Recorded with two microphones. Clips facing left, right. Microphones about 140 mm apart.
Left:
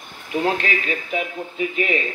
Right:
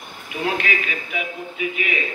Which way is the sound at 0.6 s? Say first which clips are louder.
Left 1 dB; 35° left (ahead or behind).